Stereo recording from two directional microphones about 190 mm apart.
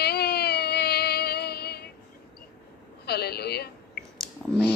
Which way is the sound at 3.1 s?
55° left (ahead or behind).